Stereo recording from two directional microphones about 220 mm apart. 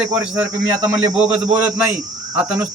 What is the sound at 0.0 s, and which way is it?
A man's voice, 5° right (ahead or behind).